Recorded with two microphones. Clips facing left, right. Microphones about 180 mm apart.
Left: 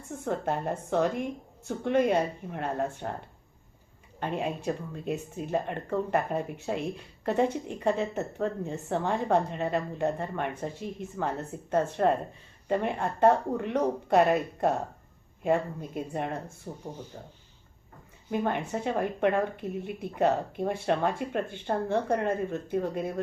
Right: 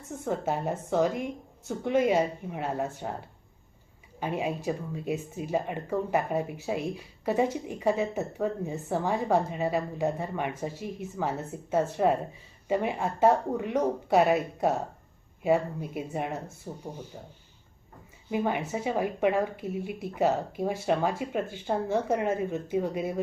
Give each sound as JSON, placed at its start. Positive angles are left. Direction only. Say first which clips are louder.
{"t": 0.1, "sound": "speech", "louder": "even", "side_deg": -5}